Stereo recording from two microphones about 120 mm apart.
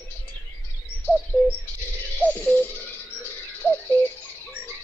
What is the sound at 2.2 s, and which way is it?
Music, 15° left (ahead or behind).